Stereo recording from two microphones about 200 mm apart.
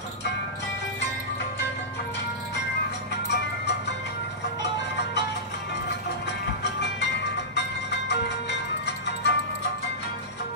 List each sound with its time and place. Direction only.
8.1 s music: 60° left (ahead or behind)